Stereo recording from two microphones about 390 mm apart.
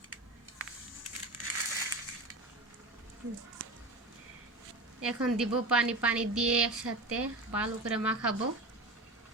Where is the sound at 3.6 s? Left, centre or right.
Right.